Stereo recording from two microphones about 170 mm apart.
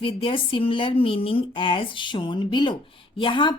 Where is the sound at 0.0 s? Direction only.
30° left (ahead or behind).